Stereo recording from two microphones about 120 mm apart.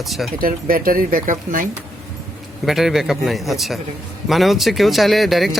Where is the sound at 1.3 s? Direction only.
90° right.